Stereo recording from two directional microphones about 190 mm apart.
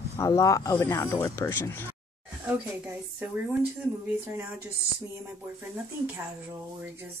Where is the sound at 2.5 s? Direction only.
10° right (ahead or behind).